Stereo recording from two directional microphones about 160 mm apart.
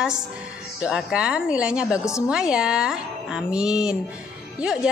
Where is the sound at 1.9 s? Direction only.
20° left (ahead or behind).